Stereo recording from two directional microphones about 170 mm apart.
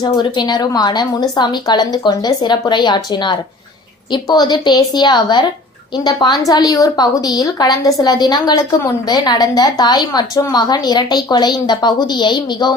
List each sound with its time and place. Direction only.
0.0 s a woman's voice: 25° left (ahead or behind)